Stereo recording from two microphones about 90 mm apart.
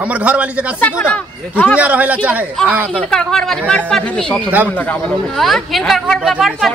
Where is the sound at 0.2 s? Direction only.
15° right (ahead or behind).